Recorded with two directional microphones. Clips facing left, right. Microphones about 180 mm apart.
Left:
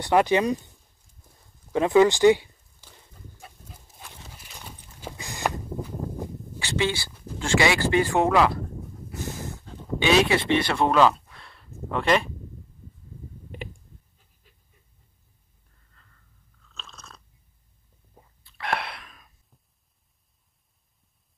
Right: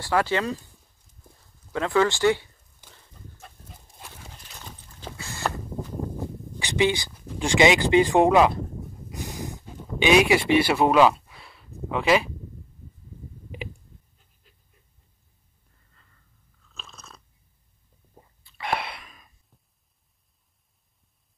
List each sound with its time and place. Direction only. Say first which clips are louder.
0.0 s speech: left 4 dB; 20° left (ahead or behind)
1.7 s speech: left 4 dB; 15° left (ahead or behind)
3.3 s dog: even; 5° left (ahead or behind)
4.6 s walk: left 1 dB; 10° left (ahead or behind)
6.6 s speech: right 3 dB; 15° right (ahead or behind)
9.1 s a sound: even; 15° right (ahead or behind)
15.9 s a sound: left 2 dB; 5° right (ahead or behind)
16.7 s chewing: even; 5° right (ahead or behind)
18.1 s a sound: right 1 dB; centre (ahead or behind)